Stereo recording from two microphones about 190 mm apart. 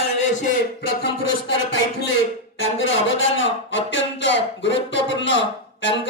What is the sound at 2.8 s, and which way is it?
Speech, 80° left.